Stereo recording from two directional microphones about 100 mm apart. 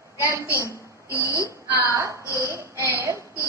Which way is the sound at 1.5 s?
25° right (ahead or behind).